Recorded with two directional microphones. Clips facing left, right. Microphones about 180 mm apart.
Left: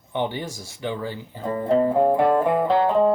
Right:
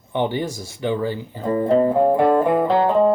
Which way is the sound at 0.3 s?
15° right (ahead or behind).